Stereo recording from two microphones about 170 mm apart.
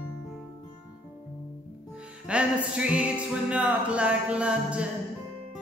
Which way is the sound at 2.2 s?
5° right (ahead or behind).